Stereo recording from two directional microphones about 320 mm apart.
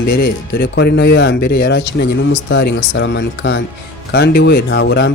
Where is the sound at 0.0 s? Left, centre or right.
Left.